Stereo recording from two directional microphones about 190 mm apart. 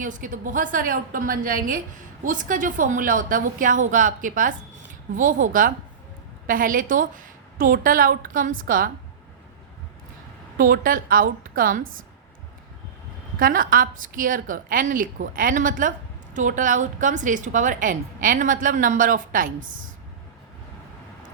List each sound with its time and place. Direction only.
0.0 s a woman's voice: 45° right (ahead or behind)
10.6 s a woman's voice: 50° right (ahead or behind)
13.4 s a woman's voice: 45° right (ahead or behind)